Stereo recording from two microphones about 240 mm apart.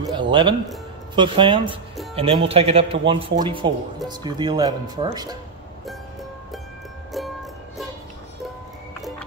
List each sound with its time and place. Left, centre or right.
0.1 s speech: centre
7.2 s music: centre